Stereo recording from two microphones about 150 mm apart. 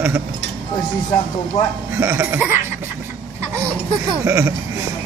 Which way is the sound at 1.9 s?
15° right (ahead or behind).